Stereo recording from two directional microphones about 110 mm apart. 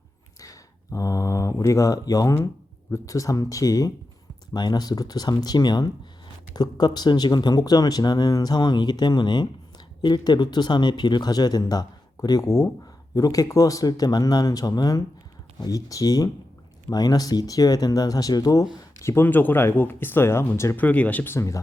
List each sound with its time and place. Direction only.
0.3 s speech: 30° left (ahead or behind)
18.9 s speech: 25° left (ahead or behind)